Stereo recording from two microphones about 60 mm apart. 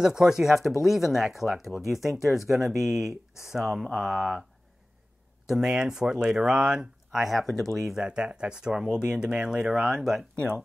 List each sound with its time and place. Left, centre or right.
0.0 s speech: centre
5.5 s speech: centre
8.0 s speech: centre